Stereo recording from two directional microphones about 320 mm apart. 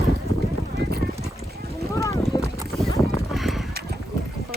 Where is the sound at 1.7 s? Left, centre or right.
Centre.